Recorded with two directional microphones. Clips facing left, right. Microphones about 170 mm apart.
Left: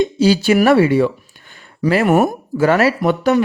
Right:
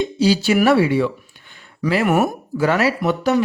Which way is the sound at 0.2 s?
50° left (ahead or behind).